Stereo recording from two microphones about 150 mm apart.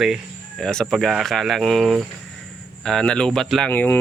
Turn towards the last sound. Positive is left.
turn(degrees=15)  # may be behind; listen again after turning